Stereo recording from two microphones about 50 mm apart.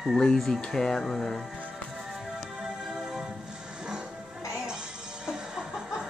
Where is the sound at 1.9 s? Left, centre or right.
Centre.